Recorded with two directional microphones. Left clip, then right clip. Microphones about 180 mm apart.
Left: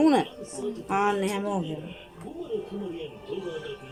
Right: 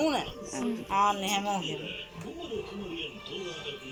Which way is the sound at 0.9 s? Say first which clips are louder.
Even; 90° left.